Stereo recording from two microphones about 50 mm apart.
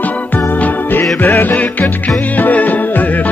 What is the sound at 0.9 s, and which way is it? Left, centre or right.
Music, left.